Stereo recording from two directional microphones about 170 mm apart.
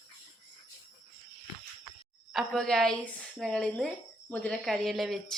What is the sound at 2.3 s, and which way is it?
A woman's voice, centre (ahead or behind).